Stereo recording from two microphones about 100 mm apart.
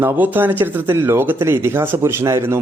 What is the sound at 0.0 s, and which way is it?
A man's voice, 20° right (ahead or behind).